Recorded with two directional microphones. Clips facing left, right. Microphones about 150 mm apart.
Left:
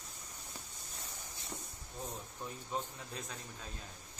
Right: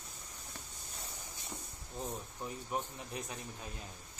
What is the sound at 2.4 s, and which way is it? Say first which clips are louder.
Speech: right 1 dB; 15° right (ahead or behind).